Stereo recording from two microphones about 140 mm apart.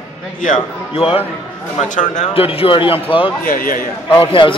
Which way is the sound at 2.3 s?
40° left (ahead or behind).